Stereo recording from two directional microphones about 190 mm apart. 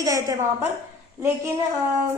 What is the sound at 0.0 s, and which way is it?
Speech, 15° right (ahead or behind).